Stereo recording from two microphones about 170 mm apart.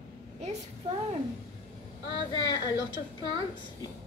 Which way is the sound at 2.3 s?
25° left (ahead or behind).